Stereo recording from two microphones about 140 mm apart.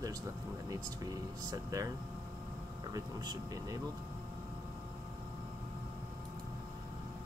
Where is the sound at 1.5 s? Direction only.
25° right (ahead or behind).